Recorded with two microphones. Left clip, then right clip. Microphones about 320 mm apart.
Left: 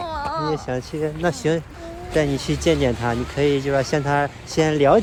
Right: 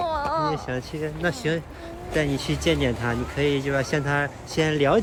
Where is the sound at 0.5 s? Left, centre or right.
Centre.